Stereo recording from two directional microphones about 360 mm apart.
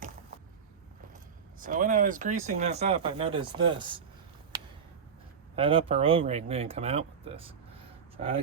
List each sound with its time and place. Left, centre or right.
1.6 s speech: right
5.5 s speech: centre